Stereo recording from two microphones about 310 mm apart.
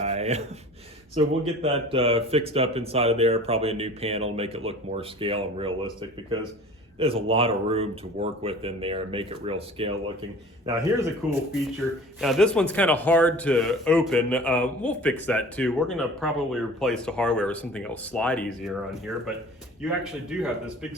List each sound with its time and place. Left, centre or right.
0.0 s gasp: right
1.1 s speech: centre